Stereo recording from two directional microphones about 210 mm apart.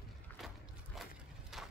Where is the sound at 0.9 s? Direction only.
Centre (ahead or behind).